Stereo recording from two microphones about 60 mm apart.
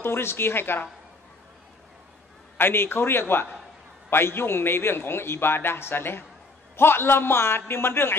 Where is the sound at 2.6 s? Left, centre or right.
Left.